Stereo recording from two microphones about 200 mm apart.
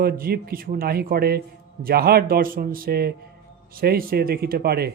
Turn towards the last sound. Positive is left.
turn(degrees=-55)  # may be behind; listen again after turning